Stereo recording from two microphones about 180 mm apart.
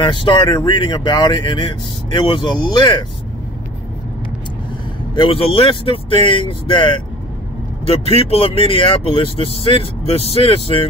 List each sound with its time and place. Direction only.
0.0 s speech: 25° left (ahead or behind)
5.1 s speech: 30° left (ahead or behind)